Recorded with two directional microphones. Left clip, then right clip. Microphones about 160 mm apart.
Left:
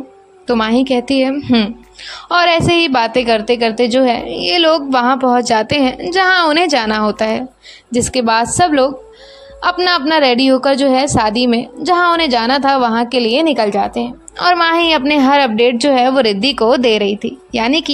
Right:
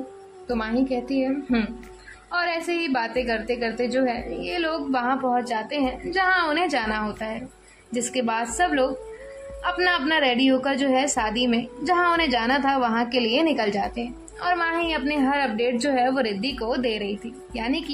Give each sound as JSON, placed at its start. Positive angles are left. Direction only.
{"t": 0.5, "sound": "a woman's voice", "side_deg": 40}
{"t": 7.9, "sound": "a woman's voice", "side_deg": 35}
{"t": 14.4, "sound": "a woman's voice", "side_deg": 40}